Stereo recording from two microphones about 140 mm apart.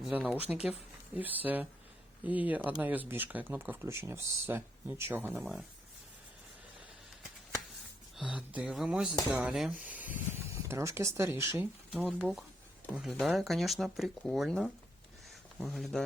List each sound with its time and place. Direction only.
0.1 s speech: 10° right (ahead or behind)
5.4 s speech: centre (ahead or behind)
8.1 s speech: 5° right (ahead or behind)
11.9 s speech: 5° right (ahead or behind)